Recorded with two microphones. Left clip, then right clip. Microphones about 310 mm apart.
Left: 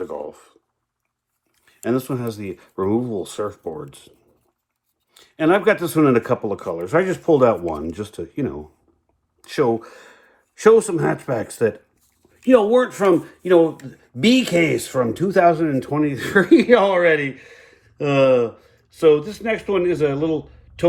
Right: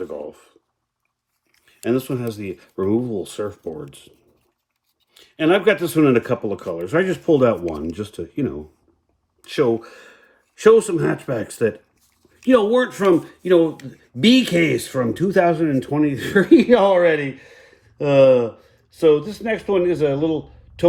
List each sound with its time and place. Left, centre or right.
1.7 s speech: centre
5.2 s speech: centre
12.2 s speech: centre